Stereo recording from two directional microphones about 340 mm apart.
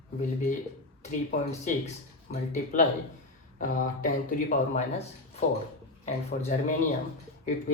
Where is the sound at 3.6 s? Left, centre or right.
Left.